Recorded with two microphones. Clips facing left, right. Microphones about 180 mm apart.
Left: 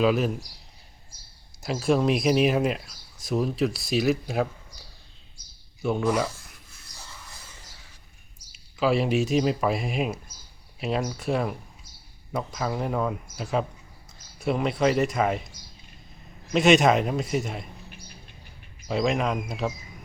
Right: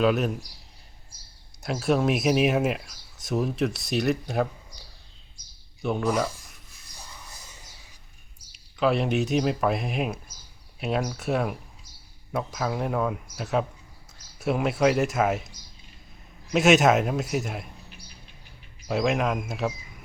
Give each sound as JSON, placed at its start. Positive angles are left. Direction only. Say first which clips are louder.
{"t": 0.0, "sound": "speech", "louder": "even", "side_deg": 0}
{"t": 1.6, "sound": "speech", "louder": "left 1 dB", "side_deg": 0}
{"t": 5.8, "sound": "speech", "louder": "left 1 dB", "side_deg": 5}
{"t": 7.0, "sound": "music", "louder": "even", "side_deg": -15}
{"t": 8.5, "sound": "speech", "louder": "even", "side_deg": 0}
{"t": 16.5, "sound": "speech", "louder": "even", "side_deg": -5}
{"t": 18.9, "sound": "speech", "louder": "even", "side_deg": -5}